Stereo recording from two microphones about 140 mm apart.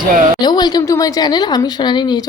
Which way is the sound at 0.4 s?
30° left (ahead or behind).